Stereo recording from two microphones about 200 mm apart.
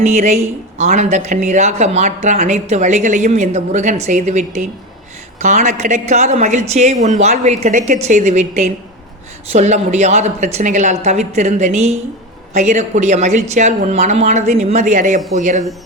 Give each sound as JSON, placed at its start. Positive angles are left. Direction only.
{"t": 0.0, "sound": "speech", "side_deg": -35}